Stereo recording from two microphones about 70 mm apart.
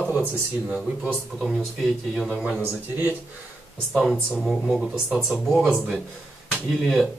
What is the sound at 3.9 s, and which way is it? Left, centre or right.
Speech, centre.